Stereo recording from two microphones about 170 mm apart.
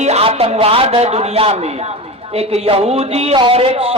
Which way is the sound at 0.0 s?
35° right (ahead or behind).